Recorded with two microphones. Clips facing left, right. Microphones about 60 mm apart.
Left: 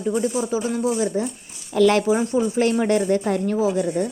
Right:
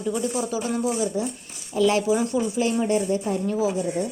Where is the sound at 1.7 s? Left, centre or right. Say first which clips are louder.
Left 4 dB; left.